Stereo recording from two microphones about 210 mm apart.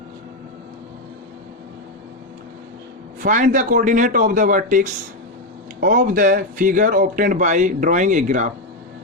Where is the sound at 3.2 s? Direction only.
35° right (ahead or behind).